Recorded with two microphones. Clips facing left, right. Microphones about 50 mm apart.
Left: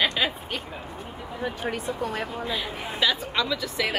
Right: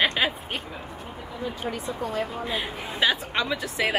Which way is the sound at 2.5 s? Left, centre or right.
Right.